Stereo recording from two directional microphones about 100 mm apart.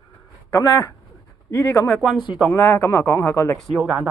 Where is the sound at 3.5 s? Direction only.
Centre (ahead or behind).